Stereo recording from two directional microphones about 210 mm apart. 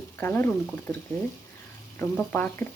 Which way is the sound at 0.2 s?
10° left (ahead or behind).